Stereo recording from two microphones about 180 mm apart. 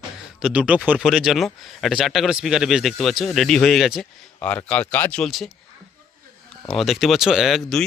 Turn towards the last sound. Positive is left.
turn(degrees=0)  # may be behind; listen again after turning